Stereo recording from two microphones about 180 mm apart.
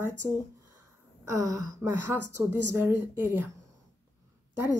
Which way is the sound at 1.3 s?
20° right (ahead or behind).